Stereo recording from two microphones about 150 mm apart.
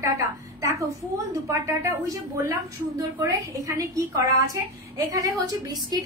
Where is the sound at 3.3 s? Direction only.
20° right (ahead or behind).